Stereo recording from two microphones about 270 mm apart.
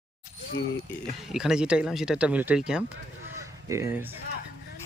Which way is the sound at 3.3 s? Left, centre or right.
Centre.